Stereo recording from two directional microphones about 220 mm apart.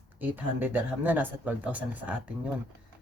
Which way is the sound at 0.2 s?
10° right (ahead or behind).